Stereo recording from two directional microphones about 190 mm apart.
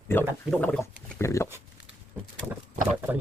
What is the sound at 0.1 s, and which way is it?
Speech, 10° left (ahead or behind).